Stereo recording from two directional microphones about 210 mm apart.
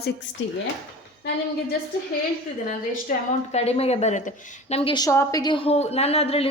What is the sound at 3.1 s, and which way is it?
A woman's voice, 40° left (ahead or behind).